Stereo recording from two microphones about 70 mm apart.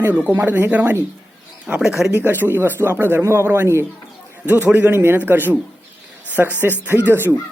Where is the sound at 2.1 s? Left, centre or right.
Right.